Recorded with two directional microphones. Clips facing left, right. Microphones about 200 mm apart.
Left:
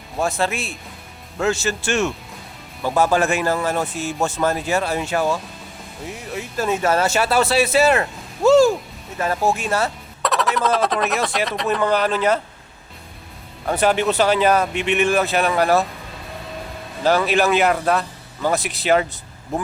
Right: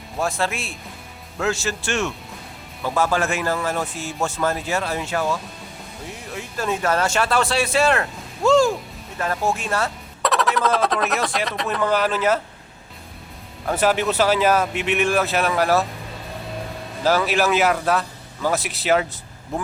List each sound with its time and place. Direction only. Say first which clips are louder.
0.2 s speech: left 2 dB; centre (ahead or behind)
2.8 s speech: left 3 dB; 20° left (ahead or behind)
6.3 s speech: left 3 dB; 5° left (ahead or behind)
13.7 s speech: left 2 dB; centre (ahead or behind)
17.0 s speech: left 2 dB; 5° right (ahead or behind)